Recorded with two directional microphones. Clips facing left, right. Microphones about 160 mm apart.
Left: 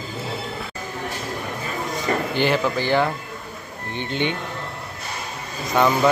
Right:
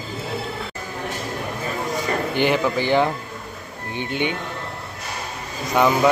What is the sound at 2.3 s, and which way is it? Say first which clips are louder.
Speech: right 2 dB; 15° right (ahead or behind).